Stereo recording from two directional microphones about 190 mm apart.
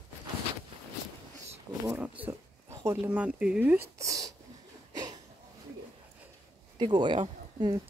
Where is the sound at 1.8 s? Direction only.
5° right (ahead or behind).